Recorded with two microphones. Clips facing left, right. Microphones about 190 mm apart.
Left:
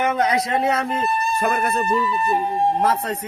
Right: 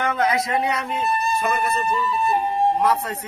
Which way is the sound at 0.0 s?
20° left (ahead or behind).